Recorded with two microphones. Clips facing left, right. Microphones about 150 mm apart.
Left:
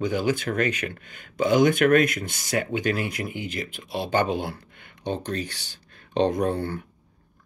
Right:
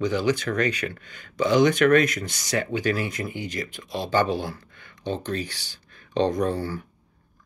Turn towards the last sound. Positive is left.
turn(degrees=55)  # may be behind; listen again after turning